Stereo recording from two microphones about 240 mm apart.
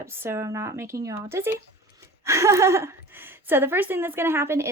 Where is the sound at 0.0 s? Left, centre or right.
Centre.